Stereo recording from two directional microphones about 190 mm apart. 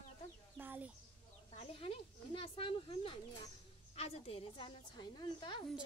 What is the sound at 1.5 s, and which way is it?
A woman's voice, 30° left (ahead or behind).